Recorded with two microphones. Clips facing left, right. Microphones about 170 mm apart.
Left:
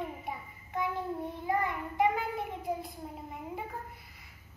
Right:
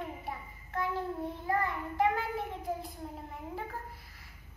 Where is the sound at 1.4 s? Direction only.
15° left (ahead or behind).